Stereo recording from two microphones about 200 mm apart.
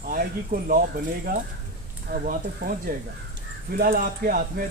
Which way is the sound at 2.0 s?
45° right (ahead or behind).